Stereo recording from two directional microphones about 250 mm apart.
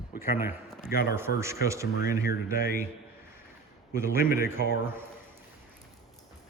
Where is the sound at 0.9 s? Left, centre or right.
Left.